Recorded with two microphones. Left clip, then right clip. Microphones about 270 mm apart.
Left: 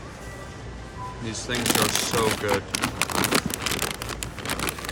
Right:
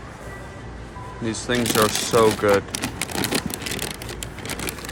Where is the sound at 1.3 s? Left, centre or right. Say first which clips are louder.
Right 3 dB; centre.